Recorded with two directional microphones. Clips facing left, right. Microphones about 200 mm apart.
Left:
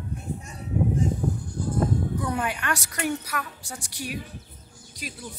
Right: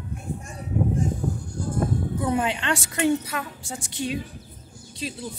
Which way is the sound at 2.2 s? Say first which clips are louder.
Right 4 dB; 25° right (ahead or behind).